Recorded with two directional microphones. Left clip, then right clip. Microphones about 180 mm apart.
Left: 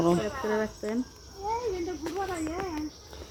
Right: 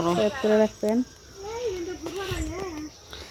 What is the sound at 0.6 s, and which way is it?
Speech, 25° right (ahead or behind).